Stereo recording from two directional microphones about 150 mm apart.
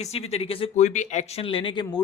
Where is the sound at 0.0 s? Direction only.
45° left (ahead or behind).